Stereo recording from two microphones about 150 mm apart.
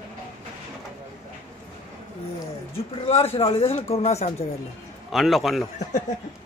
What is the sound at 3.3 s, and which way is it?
Speech, 40° left (ahead or behind).